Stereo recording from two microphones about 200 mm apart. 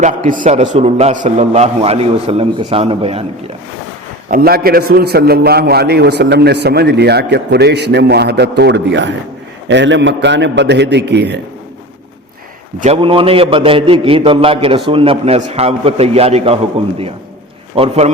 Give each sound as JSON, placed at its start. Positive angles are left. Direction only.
{"t": 0.0, "sound": "a man's voice", "side_deg": -40}
{"t": 4.3, "sound": "a man's voice", "side_deg": -50}
{"t": 12.8, "sound": "a man's voice", "side_deg": -30}
{"t": 17.7, "sound": "a man's voice", "side_deg": -30}